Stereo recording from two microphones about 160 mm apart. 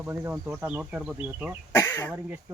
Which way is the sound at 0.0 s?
15° right (ahead or behind).